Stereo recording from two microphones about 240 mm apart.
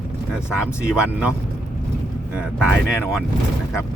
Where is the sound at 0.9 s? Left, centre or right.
Centre.